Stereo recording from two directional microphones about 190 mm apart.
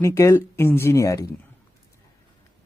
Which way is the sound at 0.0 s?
15° left (ahead or behind).